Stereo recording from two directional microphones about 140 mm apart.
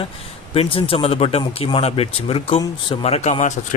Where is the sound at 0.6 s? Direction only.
40° left (ahead or behind).